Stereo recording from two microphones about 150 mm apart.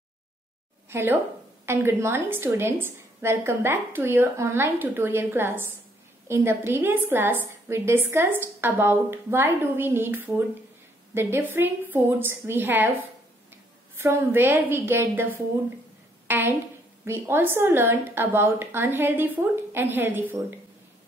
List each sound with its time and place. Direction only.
0.8 s a woman's voice: 15° right (ahead or behind)